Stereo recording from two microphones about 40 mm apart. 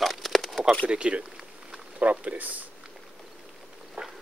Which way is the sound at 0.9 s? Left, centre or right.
Right.